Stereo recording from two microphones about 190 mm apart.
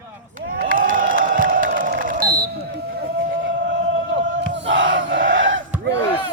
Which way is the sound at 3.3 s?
85° right.